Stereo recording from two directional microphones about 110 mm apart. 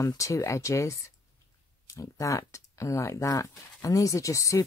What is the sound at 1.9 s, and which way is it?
Speech, 30° left (ahead or behind).